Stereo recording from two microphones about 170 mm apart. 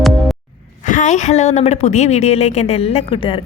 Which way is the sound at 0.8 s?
50° left (ahead or behind).